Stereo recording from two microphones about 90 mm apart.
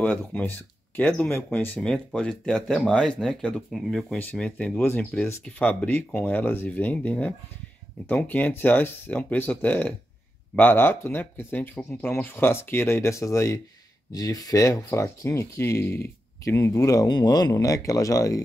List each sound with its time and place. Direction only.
0.0 s speech: 20° left (ahead or behind)
1.8 s speech: 10° left (ahead or behind)
4.2 s speech: 15° left (ahead or behind)
16.5 s speech: 35° left (ahead or behind)